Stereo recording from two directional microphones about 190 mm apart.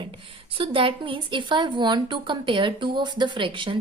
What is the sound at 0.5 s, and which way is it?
A woman's voice, 30° right (ahead or behind).